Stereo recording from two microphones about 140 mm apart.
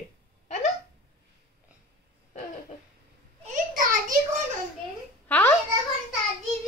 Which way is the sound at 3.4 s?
70° right (ahead or behind).